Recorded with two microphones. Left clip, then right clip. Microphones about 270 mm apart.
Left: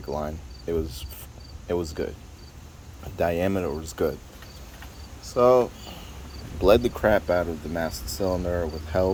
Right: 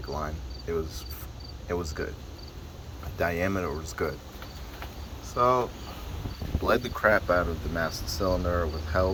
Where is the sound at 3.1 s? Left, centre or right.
Left.